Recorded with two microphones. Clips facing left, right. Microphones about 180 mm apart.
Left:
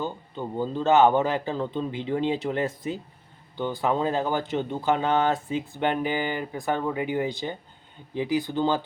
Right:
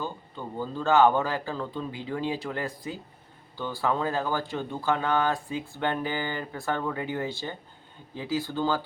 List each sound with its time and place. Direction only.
0.0 s speech: 20° left (ahead or behind)